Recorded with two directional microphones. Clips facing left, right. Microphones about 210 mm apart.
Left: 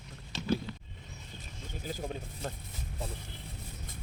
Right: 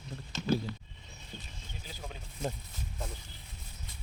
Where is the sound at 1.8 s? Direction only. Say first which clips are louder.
Left 9 dB; 45° left (ahead or behind).